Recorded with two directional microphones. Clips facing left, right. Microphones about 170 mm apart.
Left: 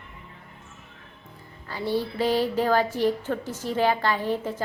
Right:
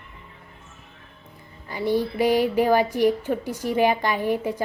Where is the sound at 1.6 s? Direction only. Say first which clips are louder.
Right 4 dB; 15° right (ahead or behind).